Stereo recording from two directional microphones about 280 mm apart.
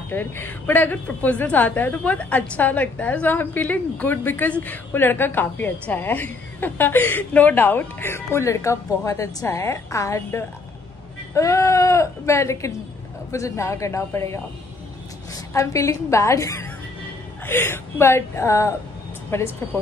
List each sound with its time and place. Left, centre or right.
0.1 s a woman's voice: centre